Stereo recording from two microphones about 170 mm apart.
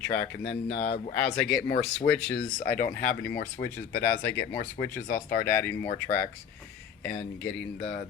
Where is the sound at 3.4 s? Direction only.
75° left (ahead or behind).